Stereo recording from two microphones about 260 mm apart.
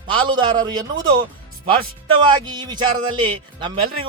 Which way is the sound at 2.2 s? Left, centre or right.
Centre.